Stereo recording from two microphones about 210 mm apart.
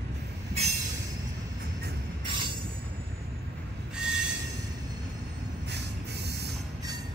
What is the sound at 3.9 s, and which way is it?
Train wheels squealing, 5° right (ahead or behind).